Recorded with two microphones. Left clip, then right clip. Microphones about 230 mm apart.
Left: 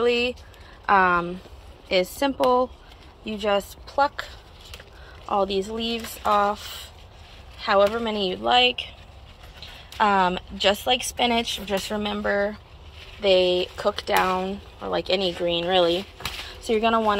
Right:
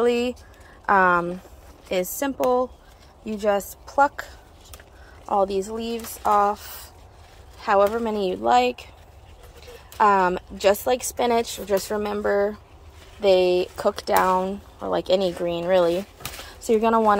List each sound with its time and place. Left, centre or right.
0.0 s speech: right
7.6 s speech: centre
8.6 s a woman's voice: right
9.9 s speech: centre
11.0 s a woman's voice: right
11.6 s speech: right